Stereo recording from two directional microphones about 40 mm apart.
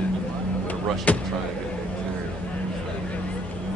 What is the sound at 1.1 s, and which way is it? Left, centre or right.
Speech, left.